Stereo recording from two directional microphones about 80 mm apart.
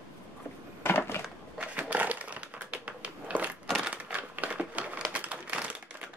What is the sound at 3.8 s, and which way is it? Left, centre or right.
Typewriter, centre.